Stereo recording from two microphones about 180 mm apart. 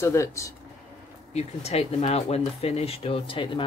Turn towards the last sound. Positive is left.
turn(degrees=30)  # may be behind; listen again after turning